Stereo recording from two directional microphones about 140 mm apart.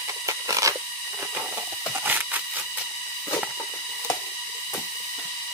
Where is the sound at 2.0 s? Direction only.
15° right (ahead or behind).